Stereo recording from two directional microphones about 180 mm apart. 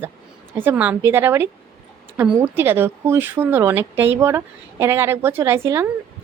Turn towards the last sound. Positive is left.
turn(degrees=-15)  # may be behind; listen again after turning